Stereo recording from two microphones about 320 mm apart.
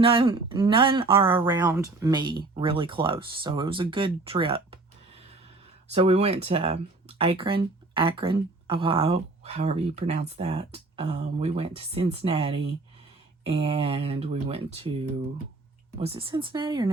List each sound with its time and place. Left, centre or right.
0.0 s speech: centre
5.9 s speech: centre
16.0 s speech: centre